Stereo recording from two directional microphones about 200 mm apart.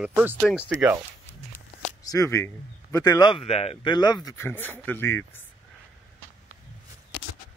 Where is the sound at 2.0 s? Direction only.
15° left (ahead or behind).